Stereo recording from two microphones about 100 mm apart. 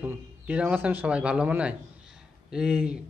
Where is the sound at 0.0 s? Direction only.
15° right (ahead or behind).